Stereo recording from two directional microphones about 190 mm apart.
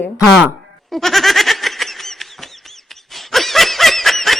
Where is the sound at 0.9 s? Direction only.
Centre (ahead or behind).